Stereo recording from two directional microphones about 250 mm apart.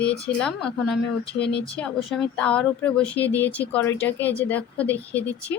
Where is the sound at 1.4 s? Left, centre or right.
Left.